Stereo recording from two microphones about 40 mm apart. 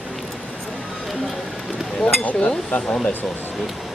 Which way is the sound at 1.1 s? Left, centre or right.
Centre.